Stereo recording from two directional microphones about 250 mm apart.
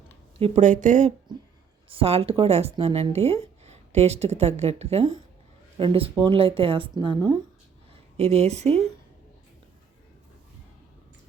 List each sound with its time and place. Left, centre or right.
0.3 s speech: right